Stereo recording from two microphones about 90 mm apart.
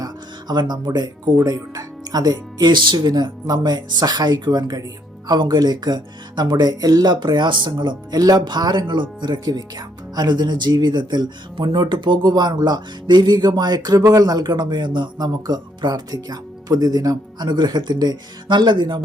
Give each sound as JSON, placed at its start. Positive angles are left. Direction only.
{"t": 0.0, "sound": "speech", "side_deg": -55}